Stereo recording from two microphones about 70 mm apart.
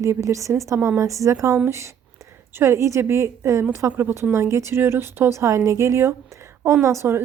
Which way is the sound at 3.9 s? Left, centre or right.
Right.